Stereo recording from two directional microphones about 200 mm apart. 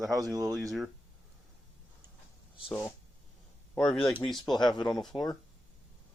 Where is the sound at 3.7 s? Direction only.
5° left (ahead or behind).